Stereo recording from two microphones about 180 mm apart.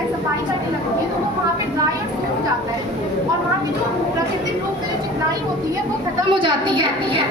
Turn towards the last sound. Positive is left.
turn(degrees=-25)  # may be behind; listen again after turning